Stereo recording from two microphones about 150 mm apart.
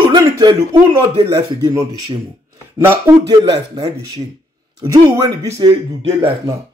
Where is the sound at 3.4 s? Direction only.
40° right (ahead or behind).